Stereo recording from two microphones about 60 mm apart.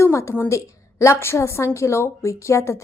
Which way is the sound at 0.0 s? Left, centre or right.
Left.